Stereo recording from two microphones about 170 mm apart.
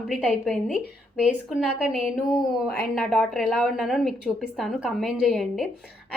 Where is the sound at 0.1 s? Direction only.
Centre (ahead or behind).